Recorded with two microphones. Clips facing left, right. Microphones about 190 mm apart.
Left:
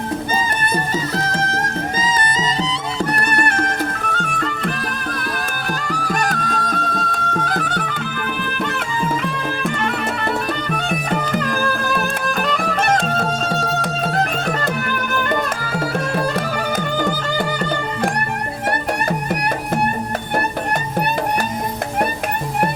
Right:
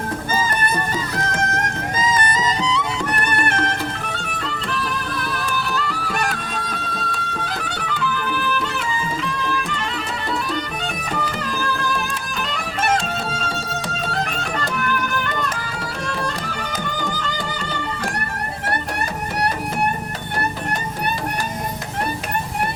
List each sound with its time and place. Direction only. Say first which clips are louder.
1.1 s music: left 2 dB; 30° left (ahead or behind); by 9.8 s 55° left (ahead or behind)
11.5 s music: left 3 dB; 50° left (ahead or behind)